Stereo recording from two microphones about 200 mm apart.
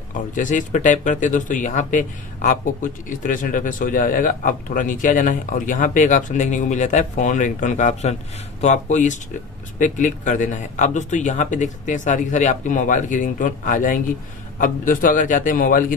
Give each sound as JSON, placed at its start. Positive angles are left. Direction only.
{"t": 0.3, "sound": "a man's voice", "side_deg": 40}